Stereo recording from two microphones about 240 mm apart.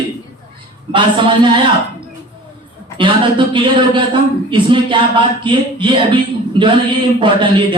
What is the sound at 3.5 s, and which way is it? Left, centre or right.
Speech, right.